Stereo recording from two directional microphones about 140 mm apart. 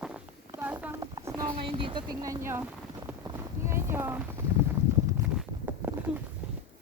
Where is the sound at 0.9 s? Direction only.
25° right (ahead or behind).